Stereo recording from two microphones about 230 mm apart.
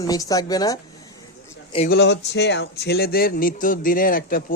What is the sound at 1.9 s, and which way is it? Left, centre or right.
Speech, left.